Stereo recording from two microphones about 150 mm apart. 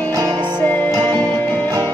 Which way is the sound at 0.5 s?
15° left (ahead or behind).